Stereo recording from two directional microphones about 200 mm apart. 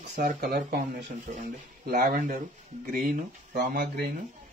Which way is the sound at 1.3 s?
35° right (ahead or behind).